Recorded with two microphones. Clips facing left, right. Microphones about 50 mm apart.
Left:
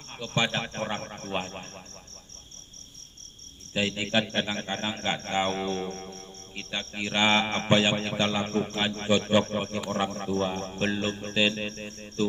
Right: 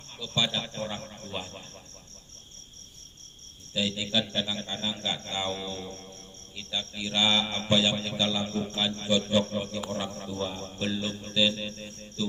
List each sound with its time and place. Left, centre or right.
0.2 s a man's voice: left
3.8 s a man's voice: left